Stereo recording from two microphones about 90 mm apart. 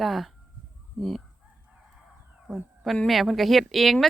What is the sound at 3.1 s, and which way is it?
Speech, centre (ahead or behind).